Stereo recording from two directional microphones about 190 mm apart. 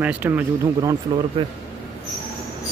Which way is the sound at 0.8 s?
20° right (ahead or behind).